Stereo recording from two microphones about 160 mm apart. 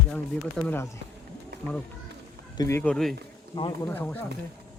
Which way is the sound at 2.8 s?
5° left (ahead or behind).